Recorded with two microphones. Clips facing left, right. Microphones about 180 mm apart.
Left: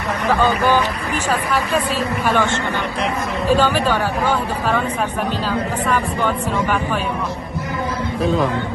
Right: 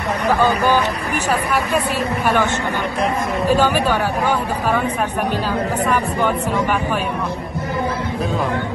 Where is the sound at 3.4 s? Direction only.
15° right (ahead or behind).